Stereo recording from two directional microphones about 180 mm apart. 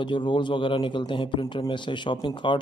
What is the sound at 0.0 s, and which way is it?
A man's voice, 25° left (ahead or behind).